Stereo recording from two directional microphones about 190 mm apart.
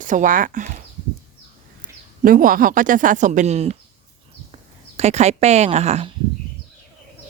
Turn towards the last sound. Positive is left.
turn(degrees=-35)  # may be behind; listen again after turning